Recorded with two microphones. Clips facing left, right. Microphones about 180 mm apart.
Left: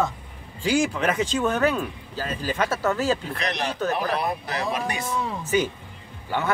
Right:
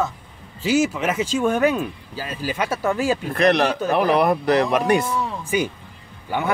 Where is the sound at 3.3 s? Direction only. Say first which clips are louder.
Right 11 dB; 60° right (ahead or behind).